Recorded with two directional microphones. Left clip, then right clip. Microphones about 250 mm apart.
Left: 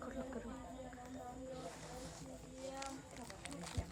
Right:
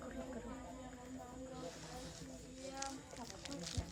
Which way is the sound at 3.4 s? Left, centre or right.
Left.